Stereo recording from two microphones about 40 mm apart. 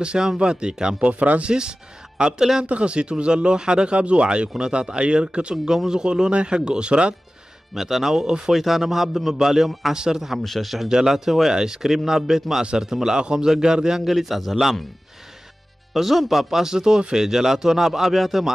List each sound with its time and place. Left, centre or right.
0.0 s speech: centre
1.0 s speech: right
1.4 s speech: right
2.6 s speech: right
7.7 s a man's voice: centre
9.9 s speech: centre
10.4 s a man's voice: centre
10.9 s speech: centre
14.0 s a man's voice: centre
15.9 s speech: centre